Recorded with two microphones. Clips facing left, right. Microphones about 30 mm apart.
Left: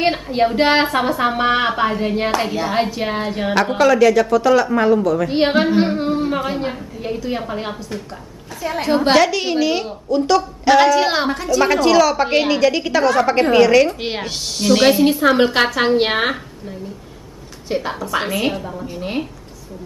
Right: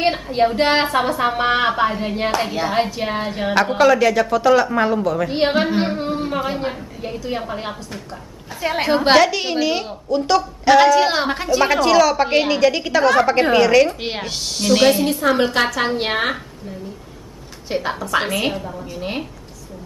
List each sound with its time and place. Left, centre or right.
0.0 s a woman's voice: centre
5.3 s a woman's voice: centre
8.8 s a woman's voice: centre
11.2 s a woman's voice: right
11.6 s a woman's voice: centre
15.2 s a woman's voice: centre
17.6 s a woman's voice: centre
18.9 s a woman's voice: centre